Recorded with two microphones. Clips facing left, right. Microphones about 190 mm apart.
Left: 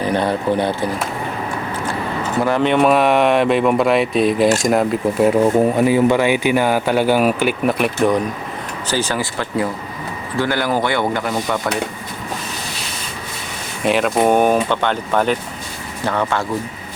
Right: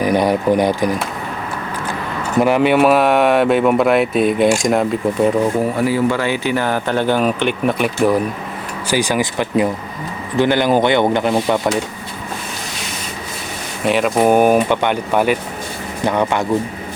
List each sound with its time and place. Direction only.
0.0 s speech: 10° right (ahead or behind)
2.4 s speech: 10° right (ahead or behind)
5.7 s speech: 20° left (ahead or behind); by 8.2 s centre (ahead or behind)
8.9 s speech: 15° right (ahead or behind)
13.8 s speech: centre (ahead or behind); by 16.5 s 15° right (ahead or behind)